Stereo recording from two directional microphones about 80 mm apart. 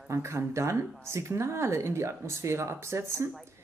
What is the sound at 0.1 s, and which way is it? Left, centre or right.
A woman's voice, right.